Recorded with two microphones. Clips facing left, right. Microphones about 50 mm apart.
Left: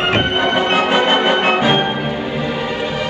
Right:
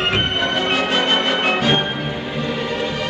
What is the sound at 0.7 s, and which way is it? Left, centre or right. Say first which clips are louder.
Music: left 4 dB; centre.